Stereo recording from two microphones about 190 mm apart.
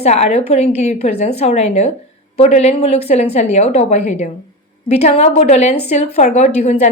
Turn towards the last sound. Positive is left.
turn(degrees=35)  # may be behind; listen again after turning